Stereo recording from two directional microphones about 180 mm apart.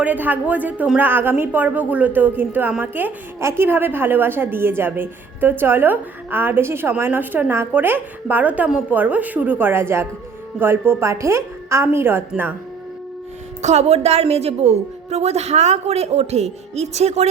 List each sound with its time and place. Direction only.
0.0 s a woman's voice: 10° right (ahead or behind)
13.6 s a woman's voice: 40° right (ahead or behind)